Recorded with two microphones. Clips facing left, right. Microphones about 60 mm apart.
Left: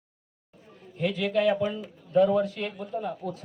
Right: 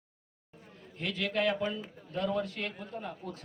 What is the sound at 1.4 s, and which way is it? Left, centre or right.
A man's voice, centre.